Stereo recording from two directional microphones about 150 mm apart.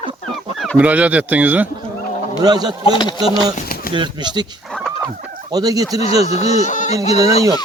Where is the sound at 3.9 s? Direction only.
30° right (ahead or behind).